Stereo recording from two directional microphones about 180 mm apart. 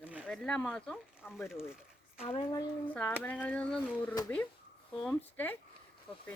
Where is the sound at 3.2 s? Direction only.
10° left (ahead or behind).